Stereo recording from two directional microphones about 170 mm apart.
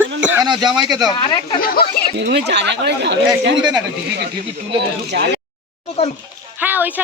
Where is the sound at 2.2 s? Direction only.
85° right.